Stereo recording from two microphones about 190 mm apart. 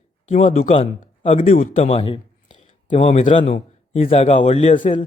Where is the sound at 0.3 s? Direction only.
35° left (ahead or behind).